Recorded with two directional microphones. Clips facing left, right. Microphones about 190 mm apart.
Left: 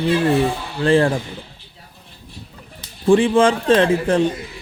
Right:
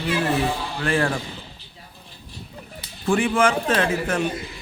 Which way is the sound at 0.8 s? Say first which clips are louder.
Left 8 dB; 30° left (ahead or behind).